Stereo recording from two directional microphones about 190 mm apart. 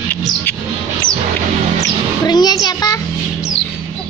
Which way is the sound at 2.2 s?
20° left (ahead or behind).